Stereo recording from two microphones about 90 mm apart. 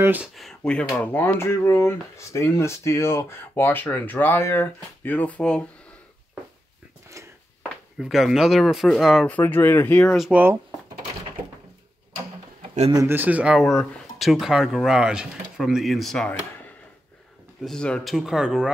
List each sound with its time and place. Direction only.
0.4 s speech: 10° left (ahead or behind)
0.9 s speech: 20° left (ahead or behind)
7.2 s a sound: 35° right (ahead or behind)
8.0 s speech: 5° right (ahead or behind)
9.2 s speech: 20° left (ahead or behind)
10.3 s speech: 25° right (ahead or behind)
13.1 s speech: 20° right (ahead or behind)
13.6 s speech: 5° left (ahead or behind)
17.6 s speech: 10° left (ahead or behind)
18.0 s speech: 5° right (ahead or behind)